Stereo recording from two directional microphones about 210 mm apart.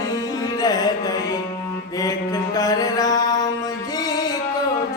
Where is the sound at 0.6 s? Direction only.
20° left (ahead or behind).